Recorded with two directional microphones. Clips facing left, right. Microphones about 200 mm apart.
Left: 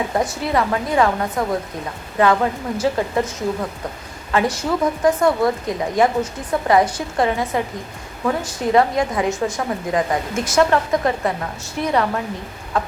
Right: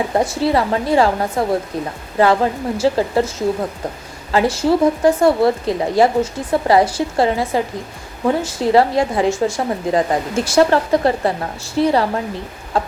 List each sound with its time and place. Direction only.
0.1 s a woman's voice: 30° right (ahead or behind)